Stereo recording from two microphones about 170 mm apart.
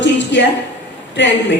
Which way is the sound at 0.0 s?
90° left.